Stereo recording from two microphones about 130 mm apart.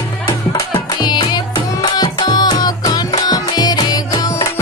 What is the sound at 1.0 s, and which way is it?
Music, 35° left (ahead or behind).